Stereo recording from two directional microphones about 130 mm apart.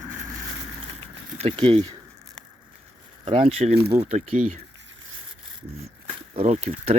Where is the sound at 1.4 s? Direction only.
50° right (ahead or behind).